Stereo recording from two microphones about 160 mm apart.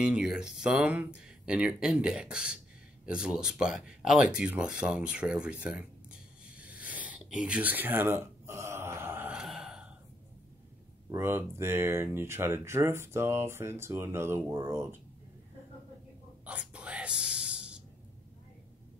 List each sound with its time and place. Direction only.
0.0 s speech: 5° right (ahead or behind)
3.1 s a sound: 5° right (ahead or behind)
11.1 s speech: 15° right (ahead or behind)
16.4 s whispering: 5° right (ahead or behind)